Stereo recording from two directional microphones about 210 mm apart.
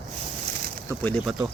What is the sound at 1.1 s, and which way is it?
Speech, centre (ahead or behind).